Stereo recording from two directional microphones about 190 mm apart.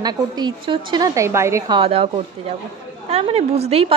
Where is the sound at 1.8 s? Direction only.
30° right (ahead or behind).